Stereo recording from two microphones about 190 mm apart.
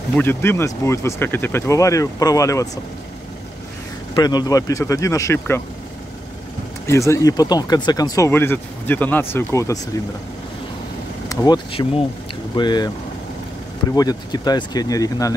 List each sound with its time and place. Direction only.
0.1 s speech: 10° left (ahead or behind)
4.1 s speech: 20° left (ahead or behind)
6.9 s speech: 15° left (ahead or behind)
11.2 s speech: 20° left (ahead or behind)
13.9 s speech: 20° left (ahead or behind)